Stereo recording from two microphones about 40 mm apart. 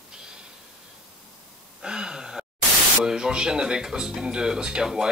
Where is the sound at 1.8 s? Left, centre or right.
Centre.